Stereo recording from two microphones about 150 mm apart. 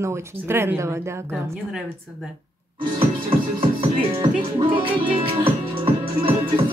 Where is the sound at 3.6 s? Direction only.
35° right (ahead or behind).